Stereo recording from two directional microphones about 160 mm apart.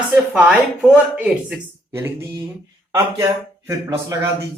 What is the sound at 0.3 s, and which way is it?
A man's voice, 5° right (ahead or behind).